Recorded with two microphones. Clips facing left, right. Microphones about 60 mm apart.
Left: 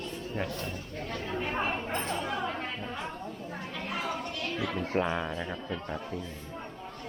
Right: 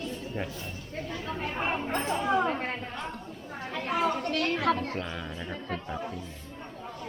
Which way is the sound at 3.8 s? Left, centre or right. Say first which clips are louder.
Right 7 dB; right.